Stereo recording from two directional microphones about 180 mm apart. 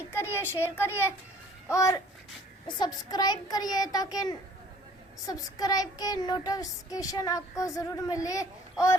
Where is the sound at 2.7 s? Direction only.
25° left (ahead or behind).